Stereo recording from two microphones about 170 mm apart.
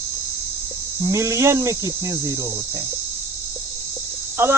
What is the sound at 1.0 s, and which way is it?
Cricket, 15° right (ahead or behind).